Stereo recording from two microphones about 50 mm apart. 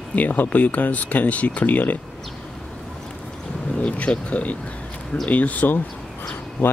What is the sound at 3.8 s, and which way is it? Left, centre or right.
Speech, left.